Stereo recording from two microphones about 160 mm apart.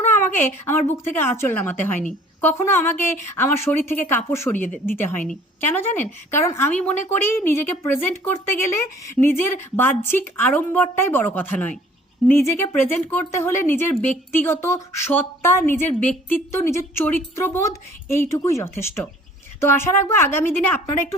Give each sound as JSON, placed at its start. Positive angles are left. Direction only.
{"t": 0.1, "sound": "a woman's voice", "side_deg": 15}